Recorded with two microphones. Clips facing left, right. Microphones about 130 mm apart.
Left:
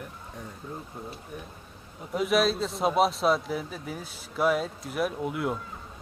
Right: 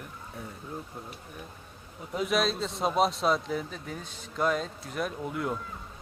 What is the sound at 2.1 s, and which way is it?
A man's voice, centre (ahead or behind).